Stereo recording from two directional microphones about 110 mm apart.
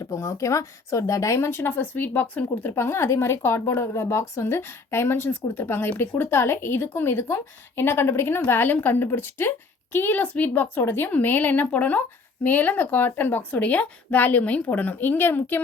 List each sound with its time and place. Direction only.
0.0 s speech: 30° left (ahead or behind)